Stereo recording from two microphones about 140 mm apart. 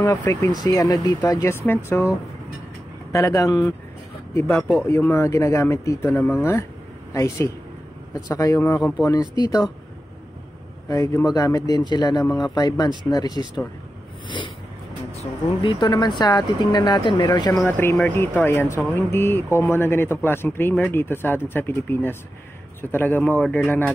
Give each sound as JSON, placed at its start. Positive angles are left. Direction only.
{"t": 0.0, "sound": "speech", "side_deg": 25}
{"t": 10.9, "sound": "speech", "side_deg": 20}
{"t": 15.1, "sound": "speech", "side_deg": 35}
{"t": 17.6, "sound": "speech", "side_deg": 15}